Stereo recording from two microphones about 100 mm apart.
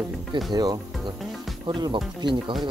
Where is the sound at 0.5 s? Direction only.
45° right (ahead or behind).